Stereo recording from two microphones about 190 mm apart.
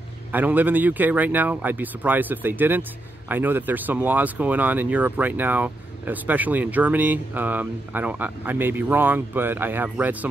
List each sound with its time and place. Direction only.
0.3 s speech: 10° right (ahead or behind)